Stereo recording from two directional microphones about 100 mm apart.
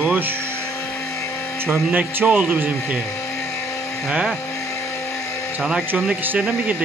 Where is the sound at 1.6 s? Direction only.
20° right (ahead or behind).